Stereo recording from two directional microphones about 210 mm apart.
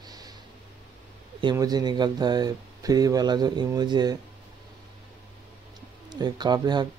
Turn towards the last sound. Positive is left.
turn(degrees=-20)  # may be behind; listen again after turning